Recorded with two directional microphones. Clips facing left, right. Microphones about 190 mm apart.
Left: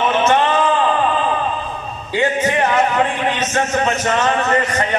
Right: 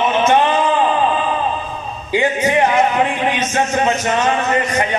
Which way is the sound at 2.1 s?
15° right (ahead or behind).